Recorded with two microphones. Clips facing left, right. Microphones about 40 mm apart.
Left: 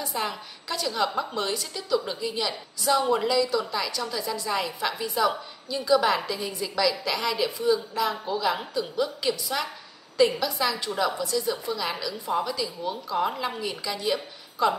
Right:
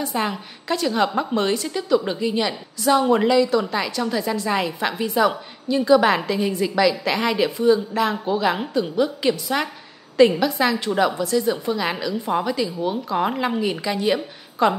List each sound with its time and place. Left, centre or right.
0.1 s a woman's voice: right